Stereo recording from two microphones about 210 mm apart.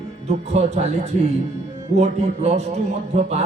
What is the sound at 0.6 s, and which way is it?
Speech, 30° right (ahead or behind).